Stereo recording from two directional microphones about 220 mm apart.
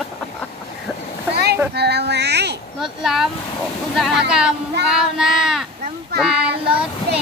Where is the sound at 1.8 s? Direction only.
50° right (ahead or behind).